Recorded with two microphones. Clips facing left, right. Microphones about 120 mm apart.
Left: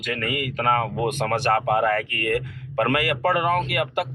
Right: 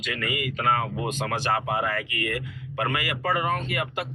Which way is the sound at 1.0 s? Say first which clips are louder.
Left 5 dB; 60° left (ahead or behind).